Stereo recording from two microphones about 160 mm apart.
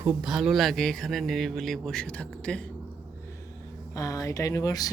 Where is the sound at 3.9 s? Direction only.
20° left (ahead or behind).